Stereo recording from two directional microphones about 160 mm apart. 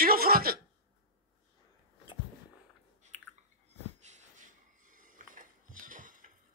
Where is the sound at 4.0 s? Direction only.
45° right (ahead or behind).